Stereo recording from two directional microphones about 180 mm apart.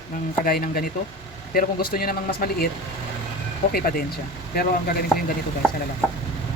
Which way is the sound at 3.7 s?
55° left (ahead or behind).